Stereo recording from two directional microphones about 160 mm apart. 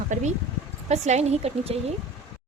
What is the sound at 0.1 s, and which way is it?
A woman's voice, 50° right (ahead or behind).